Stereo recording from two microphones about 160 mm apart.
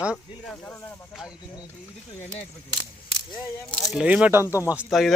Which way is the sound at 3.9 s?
5° right (ahead or behind).